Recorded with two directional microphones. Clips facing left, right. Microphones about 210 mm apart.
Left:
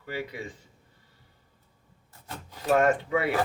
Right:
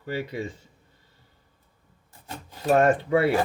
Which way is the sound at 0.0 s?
30° right (ahead or behind).